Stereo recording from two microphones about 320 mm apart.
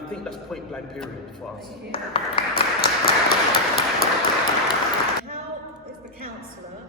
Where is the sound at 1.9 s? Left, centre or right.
Centre.